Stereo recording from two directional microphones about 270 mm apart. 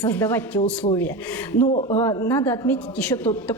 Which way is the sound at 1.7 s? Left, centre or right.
Left.